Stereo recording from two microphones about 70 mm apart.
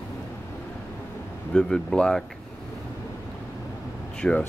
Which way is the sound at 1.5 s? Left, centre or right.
Centre.